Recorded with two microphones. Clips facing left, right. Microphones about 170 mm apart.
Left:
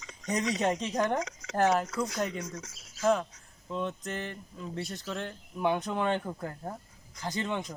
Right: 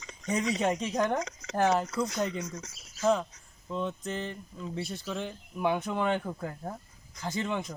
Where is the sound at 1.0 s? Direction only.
5° left (ahead or behind).